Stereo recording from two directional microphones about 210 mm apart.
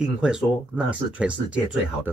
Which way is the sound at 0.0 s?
5° right (ahead or behind).